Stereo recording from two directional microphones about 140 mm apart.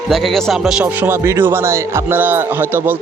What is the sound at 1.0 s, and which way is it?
A man's voice, 15° right (ahead or behind).